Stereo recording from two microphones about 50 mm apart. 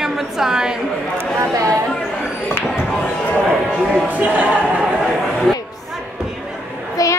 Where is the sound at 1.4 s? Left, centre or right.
Right.